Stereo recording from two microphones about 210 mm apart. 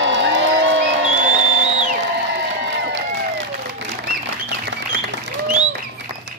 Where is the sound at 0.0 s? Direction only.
60° right (ahead or behind).